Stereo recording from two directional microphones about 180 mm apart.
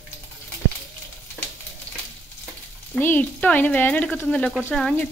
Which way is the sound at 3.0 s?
10° left (ahead or behind).